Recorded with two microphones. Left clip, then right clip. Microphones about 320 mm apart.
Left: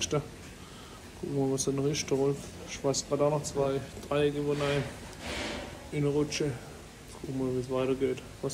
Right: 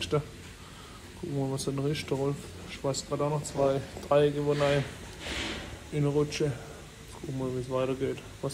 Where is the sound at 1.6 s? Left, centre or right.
Centre.